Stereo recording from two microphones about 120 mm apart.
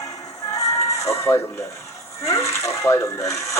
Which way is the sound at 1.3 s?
10° left (ahead or behind).